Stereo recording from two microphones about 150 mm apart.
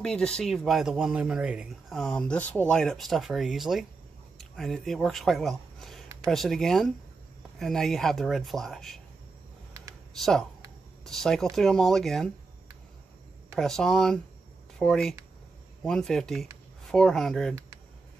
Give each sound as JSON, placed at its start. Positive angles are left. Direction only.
{"t": 0.0, "sound": "speech", "side_deg": 5}
{"t": 10.1, "sound": "speech", "side_deg": 0}
{"t": 13.6, "sound": "speech", "side_deg": 5}